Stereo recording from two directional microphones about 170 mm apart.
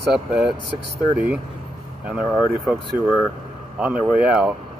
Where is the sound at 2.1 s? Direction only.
Centre (ahead or behind).